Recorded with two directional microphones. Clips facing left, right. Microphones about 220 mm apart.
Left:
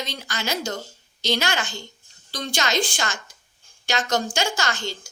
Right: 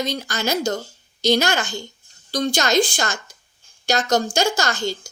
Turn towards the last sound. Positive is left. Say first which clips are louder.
# right 5 dB
turn(degrees=-40)  # may be behind; listen again after turning